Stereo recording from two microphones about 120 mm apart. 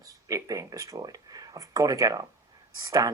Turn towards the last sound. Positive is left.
turn(degrees=-30)  # may be behind; listen again after turning